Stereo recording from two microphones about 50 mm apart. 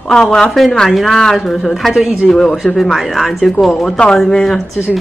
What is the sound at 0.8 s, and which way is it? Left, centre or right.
Speech, centre.